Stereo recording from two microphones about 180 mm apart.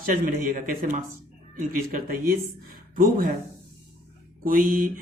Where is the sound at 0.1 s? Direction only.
50° right (ahead or behind).